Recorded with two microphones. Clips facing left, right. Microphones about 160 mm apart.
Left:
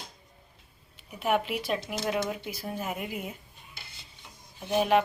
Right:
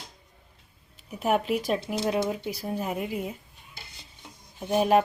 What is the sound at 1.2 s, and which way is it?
A woman's voice, 40° right (ahead or behind).